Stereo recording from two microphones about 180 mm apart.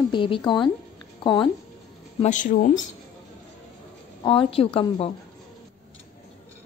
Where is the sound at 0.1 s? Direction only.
30° left (ahead or behind).